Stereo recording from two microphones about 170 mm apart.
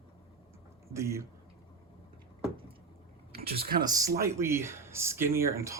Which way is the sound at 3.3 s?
65° right (ahead or behind).